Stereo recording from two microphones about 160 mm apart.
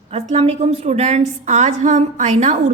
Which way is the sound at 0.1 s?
40° right (ahead or behind).